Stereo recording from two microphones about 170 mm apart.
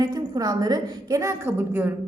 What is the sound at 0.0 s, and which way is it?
A woman's voice, 25° right (ahead or behind).